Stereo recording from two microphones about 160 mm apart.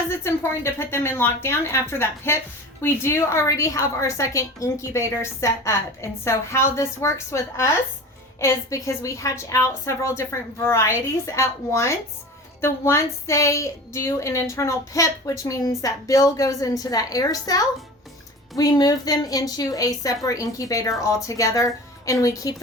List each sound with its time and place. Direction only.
0.1 s a woman's voice: 15° left (ahead or behind)